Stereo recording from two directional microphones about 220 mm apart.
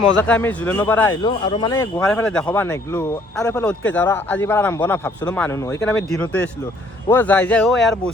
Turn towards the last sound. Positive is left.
turn(degrees=5)  # may be behind; listen again after turning